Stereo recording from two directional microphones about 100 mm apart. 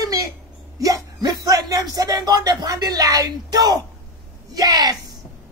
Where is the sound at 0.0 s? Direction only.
35° right (ahead or behind).